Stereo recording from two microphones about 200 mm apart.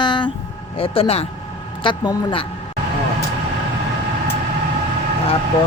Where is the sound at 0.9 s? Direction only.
30° left (ahead or behind).